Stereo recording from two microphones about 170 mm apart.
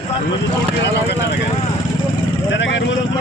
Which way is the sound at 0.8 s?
80° left.